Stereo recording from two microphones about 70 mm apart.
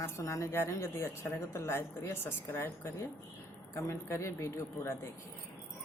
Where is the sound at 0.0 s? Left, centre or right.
Left.